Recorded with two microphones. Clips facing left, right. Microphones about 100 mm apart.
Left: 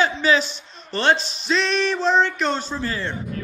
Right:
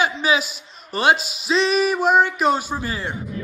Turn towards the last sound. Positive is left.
turn(degrees=-15)  # may be behind; listen again after turning